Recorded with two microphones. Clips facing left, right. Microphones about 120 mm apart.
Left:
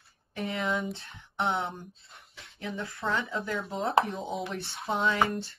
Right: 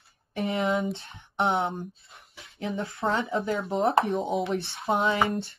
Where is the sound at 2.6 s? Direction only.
25° right (ahead or behind).